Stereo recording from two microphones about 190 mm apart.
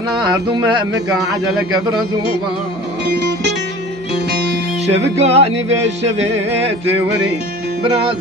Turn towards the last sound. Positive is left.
turn(degrees=-30)  # may be behind; listen again after turning